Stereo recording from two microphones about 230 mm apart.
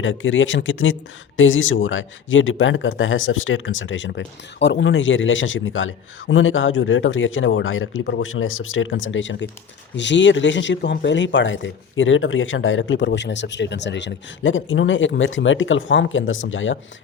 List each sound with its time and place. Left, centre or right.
0.0 s speech: left